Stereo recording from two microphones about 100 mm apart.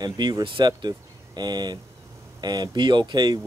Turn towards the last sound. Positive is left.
turn(degrees=-45)  # may be behind; listen again after turning